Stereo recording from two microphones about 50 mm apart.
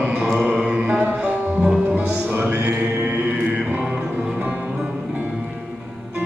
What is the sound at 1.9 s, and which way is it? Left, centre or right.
Music, right.